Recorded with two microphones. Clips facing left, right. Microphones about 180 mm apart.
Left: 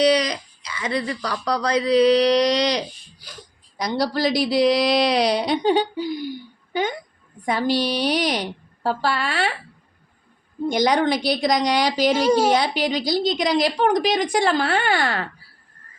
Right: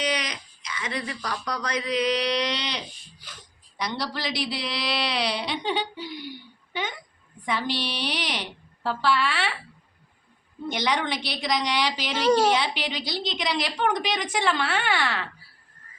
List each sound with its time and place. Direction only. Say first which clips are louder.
0.0 s a sound: left 11 dB; 35° left (ahead or behind)
1.5 s speech: left 10 dB; 35° left (ahead or behind)
7.4 s speech: left 7 dB; 40° left (ahead or behind)
10.7 s speech: left 8 dB; 40° left (ahead or behind)
12.1 s speech: even; 10° left (ahead or behind)
12.5 s speech: left 7 dB; 40° left (ahead or behind)